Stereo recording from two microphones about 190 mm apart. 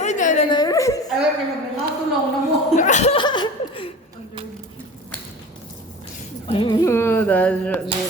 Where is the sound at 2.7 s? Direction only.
40° left (ahead or behind); by 3.8 s 25° left (ahead or behind).